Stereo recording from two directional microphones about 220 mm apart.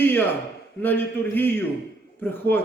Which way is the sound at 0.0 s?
10° left (ahead or behind).